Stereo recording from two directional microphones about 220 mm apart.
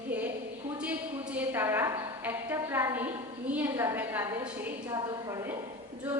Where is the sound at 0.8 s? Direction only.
5° right (ahead or behind).